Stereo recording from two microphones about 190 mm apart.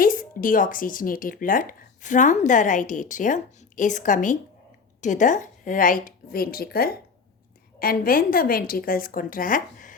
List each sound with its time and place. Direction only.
0.0 s speech: 45° left (ahead or behind)